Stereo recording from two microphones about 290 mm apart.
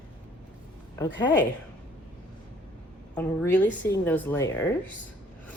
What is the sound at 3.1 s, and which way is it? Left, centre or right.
A woman's voice, centre.